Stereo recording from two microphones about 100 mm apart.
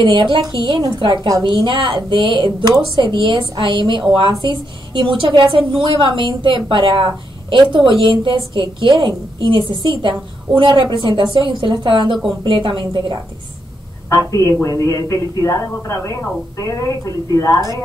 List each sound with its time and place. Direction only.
0.0 s a woman's voice: 55° right (ahead or behind)
14.0 s a woman's voice: 35° left (ahead or behind)